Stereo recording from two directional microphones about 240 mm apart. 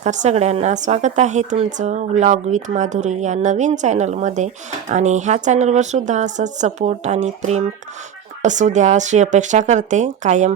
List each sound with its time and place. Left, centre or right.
0.0 s speech: right